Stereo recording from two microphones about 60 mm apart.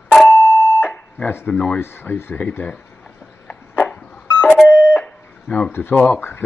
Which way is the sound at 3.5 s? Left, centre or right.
Left.